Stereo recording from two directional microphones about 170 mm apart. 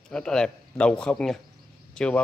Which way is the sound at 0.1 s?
5° left (ahead or behind).